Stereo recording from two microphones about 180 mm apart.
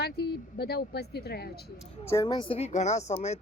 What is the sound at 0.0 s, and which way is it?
A woman's voice, 65° left (ahead or behind).